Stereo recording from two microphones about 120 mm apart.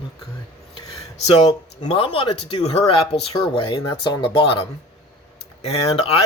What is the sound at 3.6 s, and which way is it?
Speech, 40° left (ahead or behind).